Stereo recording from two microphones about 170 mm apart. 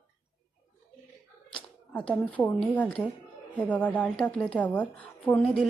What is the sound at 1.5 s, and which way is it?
A woman's voice, 5° left (ahead or behind).